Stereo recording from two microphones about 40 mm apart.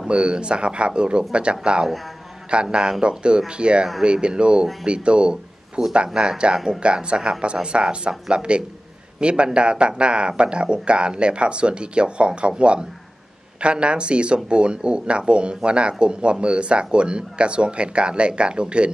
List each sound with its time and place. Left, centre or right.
0.1 s speech: right